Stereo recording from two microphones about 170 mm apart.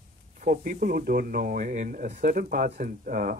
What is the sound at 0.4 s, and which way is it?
Speech, 55° right (ahead or behind).